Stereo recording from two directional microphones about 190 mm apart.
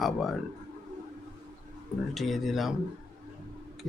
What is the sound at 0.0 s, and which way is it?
Speech, centre (ahead or behind).